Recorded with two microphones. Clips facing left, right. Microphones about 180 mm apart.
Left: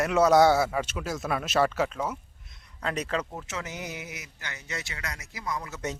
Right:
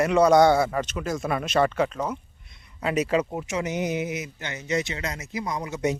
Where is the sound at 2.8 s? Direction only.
10° right (ahead or behind).